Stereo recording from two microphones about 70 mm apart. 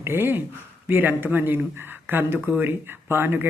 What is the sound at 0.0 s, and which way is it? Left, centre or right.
Speech, right.